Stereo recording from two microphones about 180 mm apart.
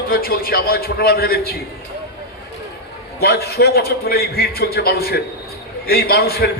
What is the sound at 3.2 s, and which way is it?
A man's voice, 65° left (ahead or behind).